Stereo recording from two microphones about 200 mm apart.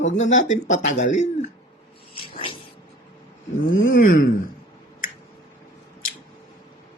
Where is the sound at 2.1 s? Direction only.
25° left (ahead or behind).